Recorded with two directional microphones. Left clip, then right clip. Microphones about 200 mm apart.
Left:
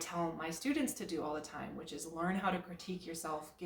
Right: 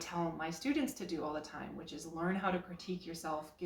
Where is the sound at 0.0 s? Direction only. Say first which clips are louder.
Even; 15° left (ahead or behind).